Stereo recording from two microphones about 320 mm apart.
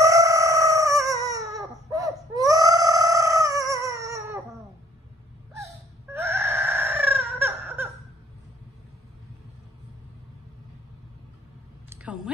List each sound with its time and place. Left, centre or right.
0.0 s chicken: centre
6.1 s chicken: centre
11.9 s a sound: centre